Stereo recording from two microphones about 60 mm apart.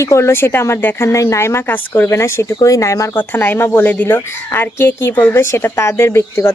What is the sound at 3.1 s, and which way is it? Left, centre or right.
A woman's voice, left.